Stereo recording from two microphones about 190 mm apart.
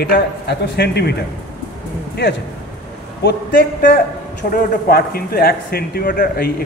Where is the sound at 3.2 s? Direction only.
60° left (ahead or behind).